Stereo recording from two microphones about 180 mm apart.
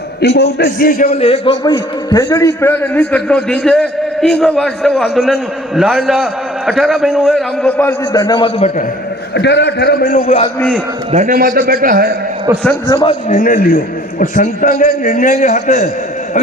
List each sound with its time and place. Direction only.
0.2 s a man's voice: 65° left (ahead or behind)
1.1 s a man's voice: 35° left (ahead or behind)
1.6 s a man's voice: 20° left (ahead or behind)
8.2 s a man's voice: 25° left (ahead or behind)
9.3 s a man's voice: 70° left (ahead or behind); by 10.4 s 45° left (ahead or behind)
11.3 s a man's voice: 55° right (ahead or behind)
12.9 s a man's voice: 25° left (ahead or behind)
13.2 s a man's voice: 45° left (ahead or behind)